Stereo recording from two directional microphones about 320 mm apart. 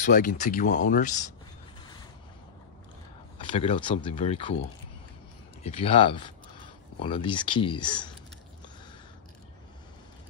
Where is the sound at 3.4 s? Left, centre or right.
Centre.